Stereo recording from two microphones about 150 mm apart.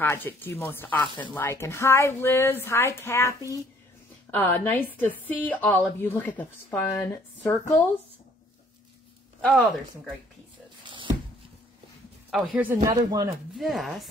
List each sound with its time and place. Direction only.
0.0 s a woman's voice: 15° left (ahead or behind)
9.4 s speech: 10° left (ahead or behind)
12.3 s speech: centre (ahead or behind)
12.8 s speech: 25° right (ahead or behind)
13.6 s speech: centre (ahead or behind)